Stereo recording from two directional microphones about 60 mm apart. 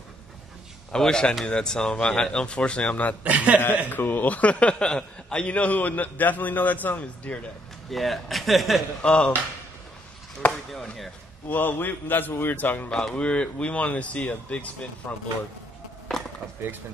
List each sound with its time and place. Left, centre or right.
0.9 s speech: centre
3.3 s speech: right
3.9 s a man's voice: left
7.9 s speech: centre
9.0 s speech: centre
10.7 s speech: centre
11.4 s a man's voice: left
12.9 s a man's voice: centre